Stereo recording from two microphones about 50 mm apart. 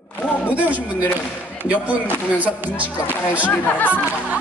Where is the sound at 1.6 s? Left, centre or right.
Right.